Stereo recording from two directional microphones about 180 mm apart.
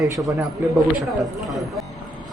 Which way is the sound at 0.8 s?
Centre (ahead or behind).